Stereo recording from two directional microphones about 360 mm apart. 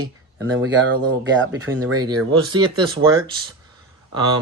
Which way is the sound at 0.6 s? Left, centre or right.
Right.